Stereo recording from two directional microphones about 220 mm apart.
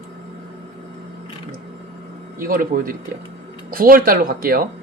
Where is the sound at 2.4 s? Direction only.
40° right (ahead or behind).